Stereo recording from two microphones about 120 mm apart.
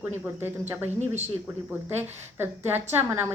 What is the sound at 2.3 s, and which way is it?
Speech, 20° right (ahead or behind).